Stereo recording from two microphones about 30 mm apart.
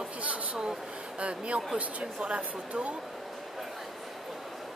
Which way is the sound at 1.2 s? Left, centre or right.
Right.